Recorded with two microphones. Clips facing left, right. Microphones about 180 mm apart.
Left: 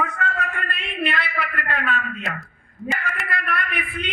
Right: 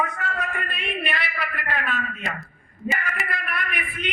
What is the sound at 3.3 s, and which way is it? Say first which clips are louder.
Speech: left 3 dB; 60° left (ahead or behind).